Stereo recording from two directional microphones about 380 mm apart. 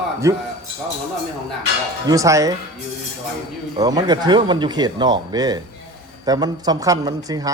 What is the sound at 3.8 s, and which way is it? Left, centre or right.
Speech, centre.